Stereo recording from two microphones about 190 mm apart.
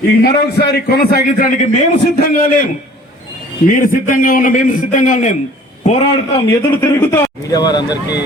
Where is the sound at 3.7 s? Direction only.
45° left (ahead or behind).